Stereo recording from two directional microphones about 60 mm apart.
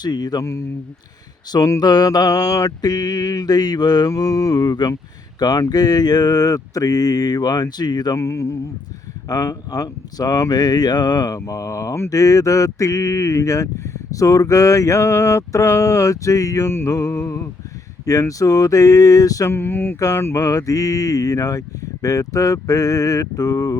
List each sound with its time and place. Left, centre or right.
0.3 s speech: left
1.6 s mantra: left
8.1 s speech: left
9.3 s mantra: left
12.1 s speech: left
16.6 s music: left
18.0 s speech: left
19.5 s a sound: left
20.0 s speech: left